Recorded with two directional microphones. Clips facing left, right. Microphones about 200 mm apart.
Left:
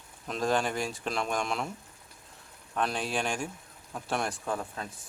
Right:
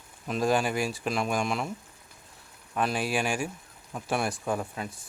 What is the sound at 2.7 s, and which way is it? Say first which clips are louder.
Speech: right 3 dB; 5° right (ahead or behind).